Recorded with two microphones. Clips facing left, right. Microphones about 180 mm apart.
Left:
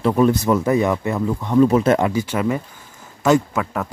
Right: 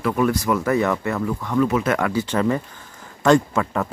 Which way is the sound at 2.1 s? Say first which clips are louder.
Even; 10° left (ahead or behind).